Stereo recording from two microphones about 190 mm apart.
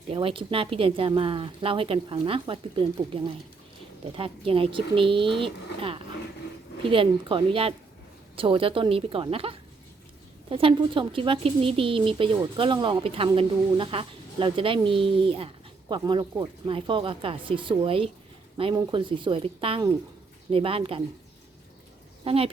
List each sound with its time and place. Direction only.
0.1 s speech: 30° right (ahead or behind)
22.2 s a woman's voice: 30° right (ahead or behind)